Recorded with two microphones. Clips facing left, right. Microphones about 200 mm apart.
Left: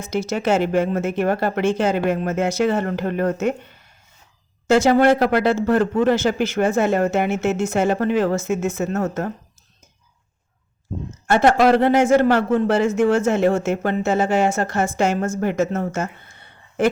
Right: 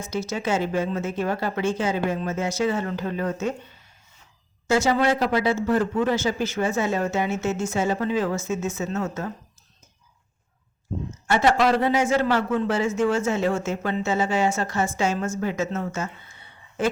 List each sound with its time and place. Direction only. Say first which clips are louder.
0.0 s a man's voice: left 5 dB; 65° left (ahead or behind)
4.7 s a man's voice: left 6 dB; 60° left (ahead or behind)
11.3 s a man's voice: left 5 dB; 55° left (ahead or behind)